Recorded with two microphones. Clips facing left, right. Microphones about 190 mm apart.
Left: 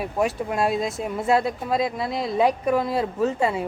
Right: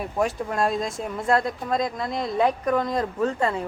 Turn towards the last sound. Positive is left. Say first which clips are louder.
# left 1 dB
turn(degrees=10)  # may be behind; listen again after turning